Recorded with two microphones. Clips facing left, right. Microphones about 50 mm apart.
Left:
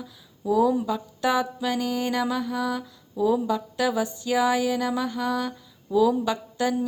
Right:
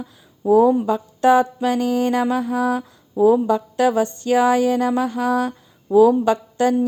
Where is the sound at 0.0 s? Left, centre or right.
Right.